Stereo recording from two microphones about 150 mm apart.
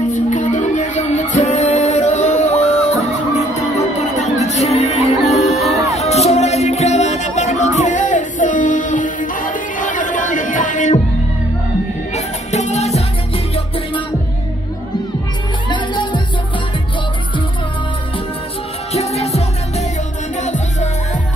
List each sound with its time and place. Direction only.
0.1 s music: 55° left (ahead or behind)
12.4 s music: 50° left (ahead or behind)
15.7 s music: 30° left (ahead or behind)
18.9 s music: 45° left (ahead or behind)